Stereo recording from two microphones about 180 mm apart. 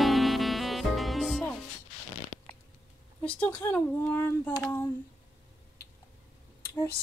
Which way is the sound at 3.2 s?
5° left (ahead or behind).